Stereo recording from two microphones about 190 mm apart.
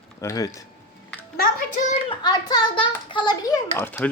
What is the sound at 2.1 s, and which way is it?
Speech, 20° left (ahead or behind).